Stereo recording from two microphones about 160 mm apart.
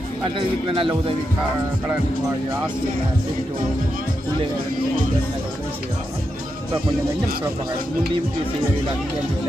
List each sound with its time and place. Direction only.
0.3 s a man's voice: 35° right (ahead or behind)